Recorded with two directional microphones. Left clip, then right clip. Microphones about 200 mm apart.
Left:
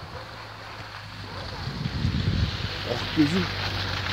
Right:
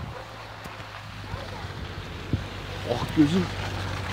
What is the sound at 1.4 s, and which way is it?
Splash, 55° right (ahead or behind).